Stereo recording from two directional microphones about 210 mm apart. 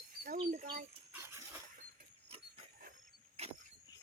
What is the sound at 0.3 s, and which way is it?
Bird, 35° right (ahead or behind).